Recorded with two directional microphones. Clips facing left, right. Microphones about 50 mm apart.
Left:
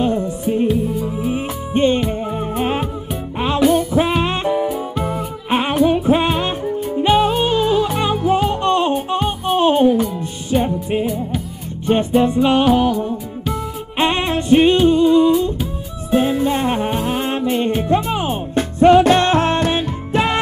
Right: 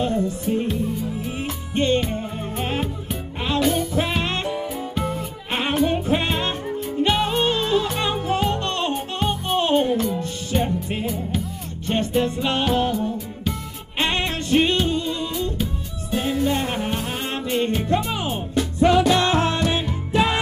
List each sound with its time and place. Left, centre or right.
0.5 s music: centre
1.0 s music: centre
2.0 s music: centre
9.1 s music: centre
11.8 s music: centre
13.9 s music: centre